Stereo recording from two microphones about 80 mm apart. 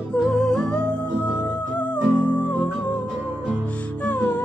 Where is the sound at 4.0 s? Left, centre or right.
Centre.